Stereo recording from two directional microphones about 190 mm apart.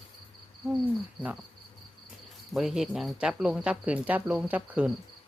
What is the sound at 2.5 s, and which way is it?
Speech, centre (ahead or behind).